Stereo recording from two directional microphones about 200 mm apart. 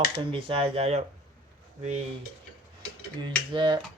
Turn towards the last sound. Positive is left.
turn(degrees=-25)  # may be behind; listen again after turning